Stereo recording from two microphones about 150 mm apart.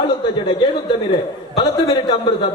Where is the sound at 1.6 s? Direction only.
30° left (ahead or behind).